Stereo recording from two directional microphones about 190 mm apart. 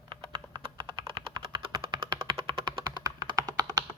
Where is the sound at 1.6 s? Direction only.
25° right (ahead or behind).